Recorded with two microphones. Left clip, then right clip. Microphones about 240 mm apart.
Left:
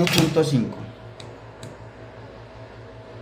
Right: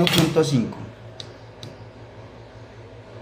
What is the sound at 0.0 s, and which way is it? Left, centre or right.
Speech, centre.